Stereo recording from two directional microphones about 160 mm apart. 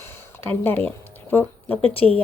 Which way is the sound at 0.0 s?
15° left (ahead or behind).